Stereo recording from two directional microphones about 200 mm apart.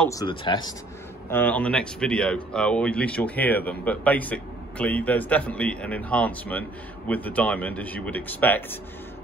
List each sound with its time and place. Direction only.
0.1 s speech: 20° left (ahead or behind)
1.3 s speech: 10° left (ahead or behind)